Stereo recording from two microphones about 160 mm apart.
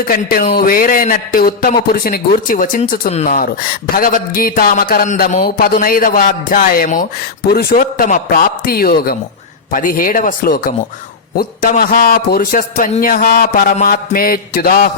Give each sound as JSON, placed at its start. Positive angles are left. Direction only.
{"t": 0.1, "sound": "a man's voice", "side_deg": 65}
{"t": 3.1, "sound": "speech", "side_deg": 40}
{"t": 3.3, "sound": "a man's voice", "side_deg": 65}
{"t": 7.5, "sound": "a man's voice", "side_deg": 70}